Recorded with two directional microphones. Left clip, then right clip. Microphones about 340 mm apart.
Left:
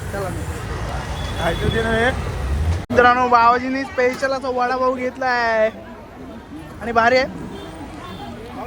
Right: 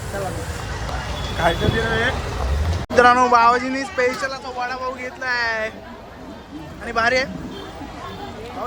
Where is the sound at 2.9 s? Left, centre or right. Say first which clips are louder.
Even; centre.